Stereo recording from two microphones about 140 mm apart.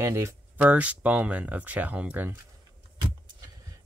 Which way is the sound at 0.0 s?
20° right (ahead or behind).